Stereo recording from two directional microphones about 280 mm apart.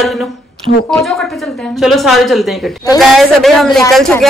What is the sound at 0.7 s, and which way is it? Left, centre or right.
Speech, left.